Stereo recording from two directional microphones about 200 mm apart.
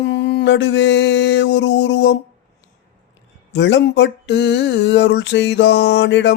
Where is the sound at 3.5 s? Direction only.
60° left (ahead or behind).